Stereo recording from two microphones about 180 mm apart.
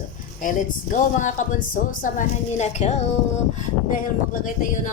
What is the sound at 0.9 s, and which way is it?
A woman's voice, 45° left (ahead or behind).